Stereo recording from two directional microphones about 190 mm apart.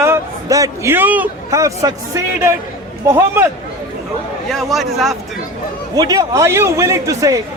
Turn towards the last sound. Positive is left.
turn(degrees=-15)  # may be behind; listen again after turning